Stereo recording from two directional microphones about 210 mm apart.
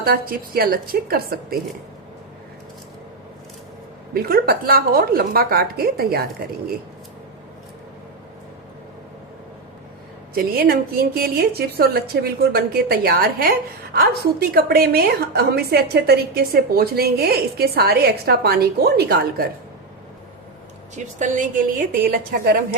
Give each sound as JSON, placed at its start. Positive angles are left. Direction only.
{"t": 0.0, "sound": "a woman's voice", "side_deg": -45}
{"t": 4.1, "sound": "a woman's voice", "side_deg": -45}
{"t": 10.3, "sound": "a woman's voice", "side_deg": -45}
{"t": 20.9, "sound": "a woman's voice", "side_deg": -35}